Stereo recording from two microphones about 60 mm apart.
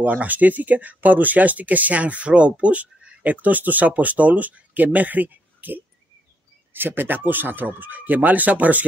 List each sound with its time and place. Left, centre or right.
0.0 s speech: right